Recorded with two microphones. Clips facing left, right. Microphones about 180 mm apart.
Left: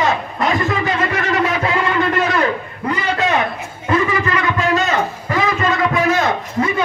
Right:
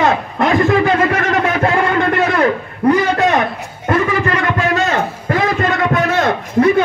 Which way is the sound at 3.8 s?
60° right (ahead or behind).